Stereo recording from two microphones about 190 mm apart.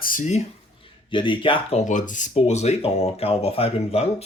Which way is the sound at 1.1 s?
25° left (ahead or behind).